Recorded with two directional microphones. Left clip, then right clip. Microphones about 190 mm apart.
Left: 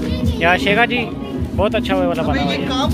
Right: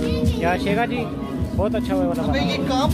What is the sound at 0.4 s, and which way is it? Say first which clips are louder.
Speech: left 8 dB; centre (ahead or behind).